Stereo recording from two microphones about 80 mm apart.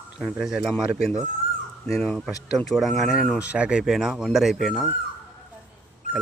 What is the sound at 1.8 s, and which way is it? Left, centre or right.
Speech, centre.